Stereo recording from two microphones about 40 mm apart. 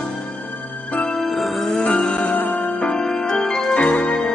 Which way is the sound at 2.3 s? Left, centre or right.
Left.